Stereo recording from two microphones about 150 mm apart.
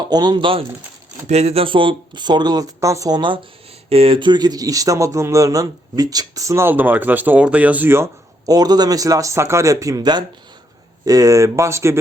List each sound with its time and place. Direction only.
0.0 s speech: 30° right (ahead or behind)
1.3 s speech: 45° right (ahead or behind); by 11.9 s 20° right (ahead or behind)